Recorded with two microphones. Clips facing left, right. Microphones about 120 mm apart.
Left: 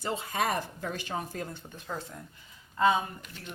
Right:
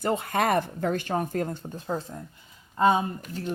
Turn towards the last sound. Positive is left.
turn(degrees=-40)  # may be behind; listen again after turning